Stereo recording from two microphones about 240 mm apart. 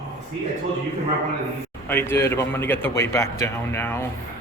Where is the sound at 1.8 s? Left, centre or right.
Centre.